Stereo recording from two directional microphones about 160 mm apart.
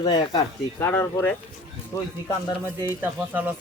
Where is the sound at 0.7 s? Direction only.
15° left (ahead or behind).